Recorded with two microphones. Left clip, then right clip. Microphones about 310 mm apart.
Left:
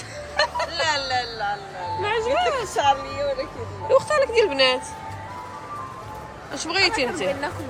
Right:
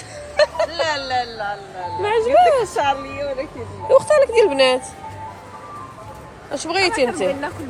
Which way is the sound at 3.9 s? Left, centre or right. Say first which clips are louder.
Right 5 dB; centre.